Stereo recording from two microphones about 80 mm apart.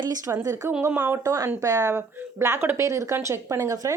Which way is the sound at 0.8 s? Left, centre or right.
Right.